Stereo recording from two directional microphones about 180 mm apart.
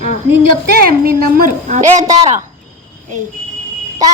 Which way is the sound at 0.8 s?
55° right (ahead or behind).